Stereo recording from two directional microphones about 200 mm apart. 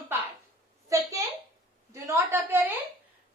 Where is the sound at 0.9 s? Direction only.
15° right (ahead or behind).